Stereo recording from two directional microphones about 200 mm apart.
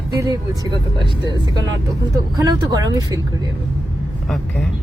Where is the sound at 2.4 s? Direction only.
20° right (ahead or behind).